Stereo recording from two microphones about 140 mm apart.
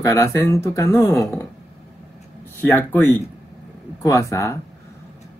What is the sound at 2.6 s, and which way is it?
Speech, 15° left (ahead or behind).